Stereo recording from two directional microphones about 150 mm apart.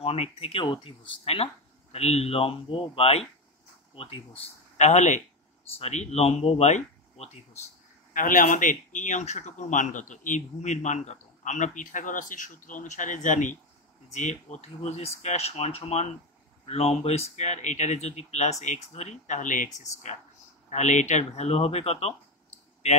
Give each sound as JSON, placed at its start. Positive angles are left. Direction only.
{"t": 0.0, "sound": "speech", "side_deg": 40}